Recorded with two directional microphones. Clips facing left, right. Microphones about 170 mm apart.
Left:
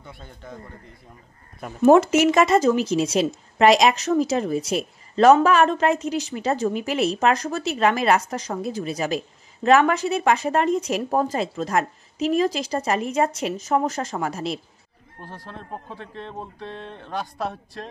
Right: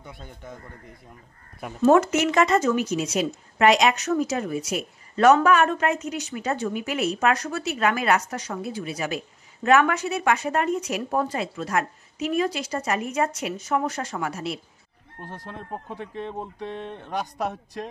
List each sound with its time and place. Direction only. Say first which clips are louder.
0.0 s speech: even; 15° right (ahead or behind)
1.9 s speech: left 4 dB; 25° left (ahead or behind)
15.3 s speech: right 1 dB; 15° right (ahead or behind)